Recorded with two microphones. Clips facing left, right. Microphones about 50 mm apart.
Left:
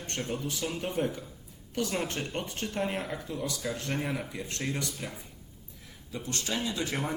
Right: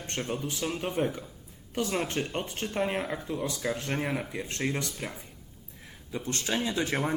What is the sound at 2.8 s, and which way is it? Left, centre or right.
Speech, centre.